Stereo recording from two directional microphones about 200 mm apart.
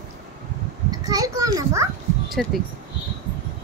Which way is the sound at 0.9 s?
20° right (ahead or behind).